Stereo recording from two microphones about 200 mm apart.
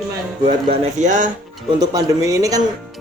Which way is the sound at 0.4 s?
35° right (ahead or behind).